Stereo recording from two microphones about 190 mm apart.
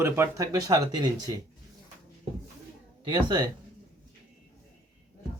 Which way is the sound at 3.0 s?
20° right (ahead or behind).